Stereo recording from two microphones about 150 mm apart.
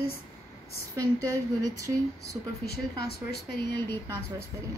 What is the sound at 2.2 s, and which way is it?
Speech, 90° left.